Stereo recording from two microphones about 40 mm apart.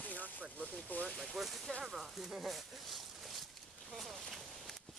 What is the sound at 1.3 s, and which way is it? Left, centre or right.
Speech, centre.